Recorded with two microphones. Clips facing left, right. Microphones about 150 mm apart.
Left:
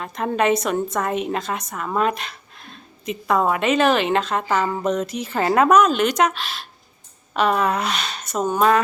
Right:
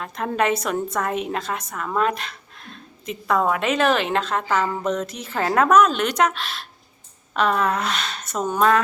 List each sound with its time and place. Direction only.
0.0 s speech: centre (ahead or behind)